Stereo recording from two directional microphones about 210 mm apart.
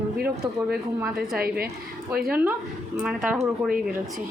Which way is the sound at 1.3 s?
45° right (ahead or behind).